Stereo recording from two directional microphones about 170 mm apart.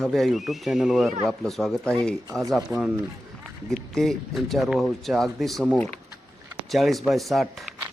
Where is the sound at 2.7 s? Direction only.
15° right (ahead or behind).